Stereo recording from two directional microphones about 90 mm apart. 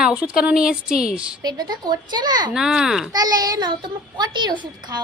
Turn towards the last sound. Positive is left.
turn(degrees=-55)  # may be behind; listen again after turning